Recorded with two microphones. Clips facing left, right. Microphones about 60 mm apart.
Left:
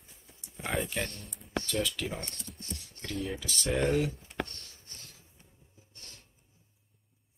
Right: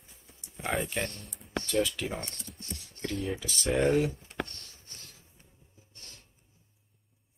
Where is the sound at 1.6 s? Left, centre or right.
Centre.